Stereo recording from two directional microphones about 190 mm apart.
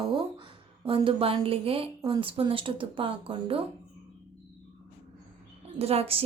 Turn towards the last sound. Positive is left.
turn(degrees=-30)  # may be behind; listen again after turning